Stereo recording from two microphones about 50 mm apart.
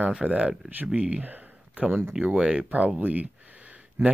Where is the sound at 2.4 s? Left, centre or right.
Centre.